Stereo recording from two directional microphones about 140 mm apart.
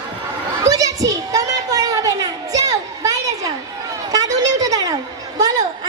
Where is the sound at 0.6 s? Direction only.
25° right (ahead or behind).